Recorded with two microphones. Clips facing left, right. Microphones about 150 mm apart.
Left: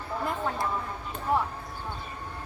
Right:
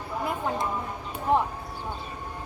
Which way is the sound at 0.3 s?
15° right (ahead or behind).